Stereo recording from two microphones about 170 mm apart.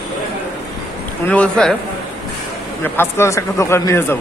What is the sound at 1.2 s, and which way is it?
Speech, 5° left (ahead or behind).